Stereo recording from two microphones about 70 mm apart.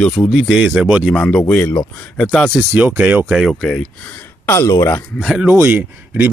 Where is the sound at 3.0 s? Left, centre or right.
Right.